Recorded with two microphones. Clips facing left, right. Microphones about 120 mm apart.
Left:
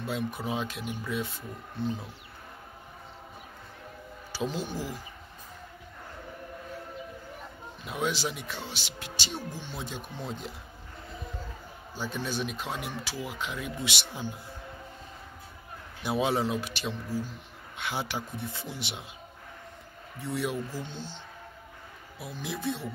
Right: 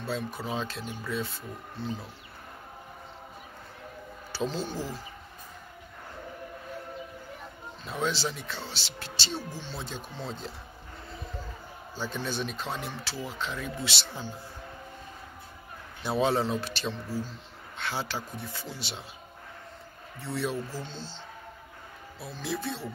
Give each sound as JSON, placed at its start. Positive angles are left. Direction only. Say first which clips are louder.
{"t": 0.0, "sound": "speech", "louder": "left 1 dB", "side_deg": 15}
{"t": 4.3, "sound": "speech", "louder": "right 1 dB", "side_deg": 10}
{"t": 7.8, "sound": "speech", "louder": "even", "side_deg": 10}
{"t": 12.0, "sound": "speech", "louder": "even", "side_deg": 10}
{"t": 16.0, "sound": "speech", "louder": "right 1 dB", "side_deg": 10}
{"t": 20.2, "sound": "speech", "louder": "even", "side_deg": 15}
{"t": 22.2, "sound": "speech", "louder": "even", "side_deg": 15}